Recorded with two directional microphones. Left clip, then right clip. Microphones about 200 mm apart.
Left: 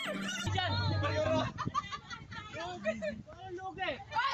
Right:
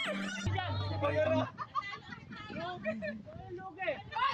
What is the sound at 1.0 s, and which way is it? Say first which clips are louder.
Speech: right 3 dB; 20° right (ahead or behind).